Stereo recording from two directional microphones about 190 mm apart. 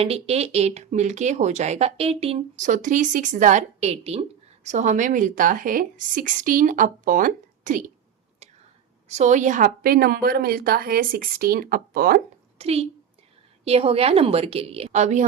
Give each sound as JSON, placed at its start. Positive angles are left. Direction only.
{"t": 0.0, "sound": "speech", "side_deg": -30}
{"t": 9.0, "sound": "a woman's voice", "side_deg": -40}
{"t": 12.5, "sound": "a woman's voice", "side_deg": -30}